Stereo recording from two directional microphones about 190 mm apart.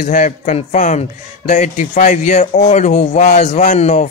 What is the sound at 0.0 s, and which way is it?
A man's voice, 40° left (ahead or behind).